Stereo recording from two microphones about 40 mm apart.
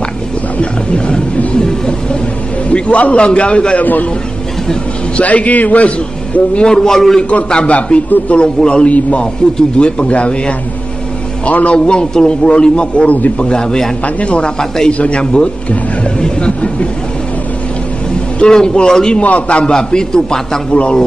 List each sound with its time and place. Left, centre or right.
0.6 s wild animals: left
1.6 s a sound: centre
2.7 s a man's voice: left
3.8 s a man's voice: left
5.1 s a man's voice: left
6.6 s a man's voice: centre
7.6 s a man's voice: left; by 13.9 s centre
14.0 s a man's voice: left
18.4 s a man's voice: left
19.2 s a man's voice: left
19.6 s a man's voice: centre
20.7 s a man's voice: left